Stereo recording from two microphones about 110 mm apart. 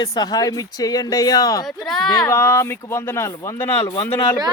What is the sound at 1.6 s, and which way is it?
Speech, centre (ahead or behind).